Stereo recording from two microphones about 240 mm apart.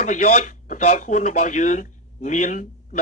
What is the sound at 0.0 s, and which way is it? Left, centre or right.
Speech, left.